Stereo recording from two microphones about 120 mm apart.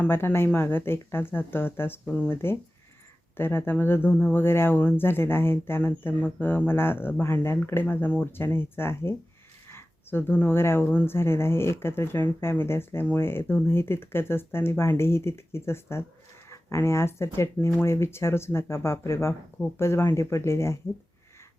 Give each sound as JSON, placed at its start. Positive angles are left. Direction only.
{"t": 0.0, "sound": "speech", "side_deg": 15}